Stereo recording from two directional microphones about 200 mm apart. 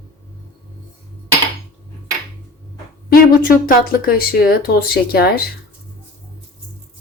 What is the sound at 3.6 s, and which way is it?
Speech, 50° left (ahead or behind).